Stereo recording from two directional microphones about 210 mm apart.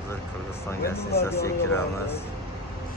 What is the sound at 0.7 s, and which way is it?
Speech, 10° left (ahead or behind).